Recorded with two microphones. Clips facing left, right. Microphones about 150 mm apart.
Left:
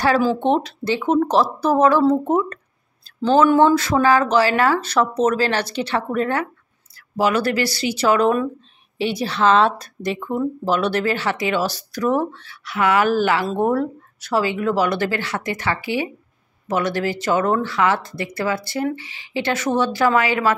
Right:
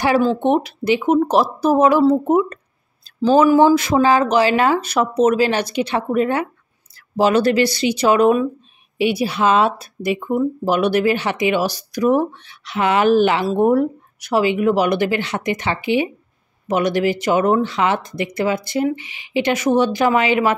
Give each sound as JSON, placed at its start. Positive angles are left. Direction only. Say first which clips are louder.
{"t": 0.4, "sound": "a woman's voice", "louder": "right 2 dB", "side_deg": -10}